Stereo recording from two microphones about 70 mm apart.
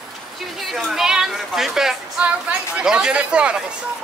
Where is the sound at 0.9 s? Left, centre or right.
Centre.